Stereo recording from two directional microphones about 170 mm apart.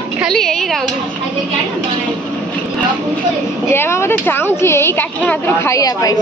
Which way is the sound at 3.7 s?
15° left (ahead or behind).